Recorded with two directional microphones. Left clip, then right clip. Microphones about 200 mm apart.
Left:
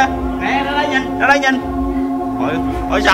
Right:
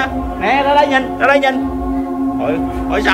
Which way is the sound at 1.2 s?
Centre (ahead or behind).